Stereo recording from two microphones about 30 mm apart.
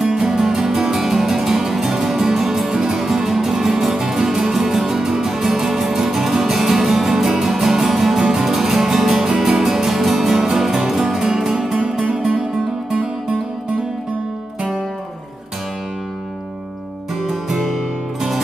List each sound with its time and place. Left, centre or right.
0.0 s music: centre
11.1 s music: centre
12.9 s music: right
17.3 s music: centre